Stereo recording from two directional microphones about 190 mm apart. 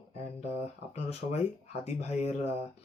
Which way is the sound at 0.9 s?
35° left (ahead or behind).